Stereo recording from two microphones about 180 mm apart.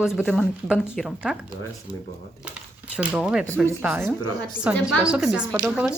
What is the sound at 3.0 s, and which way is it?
A woman's voice, 5° right (ahead or behind).